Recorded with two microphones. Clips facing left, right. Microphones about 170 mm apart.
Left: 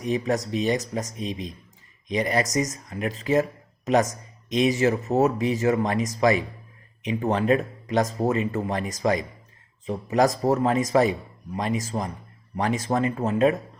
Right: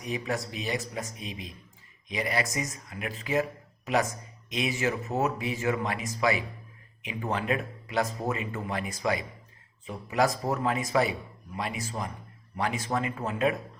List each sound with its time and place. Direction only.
0.0 s speech: 35° left (ahead or behind)